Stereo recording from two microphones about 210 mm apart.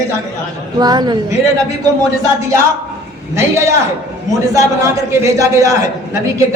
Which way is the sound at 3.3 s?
15° right (ahead or behind).